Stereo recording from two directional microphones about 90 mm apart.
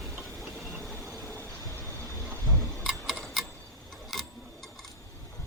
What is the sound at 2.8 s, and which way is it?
Tick-tock, centre (ahead or behind).